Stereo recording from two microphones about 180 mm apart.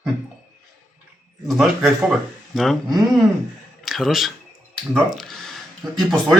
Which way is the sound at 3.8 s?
Centre (ahead or behind).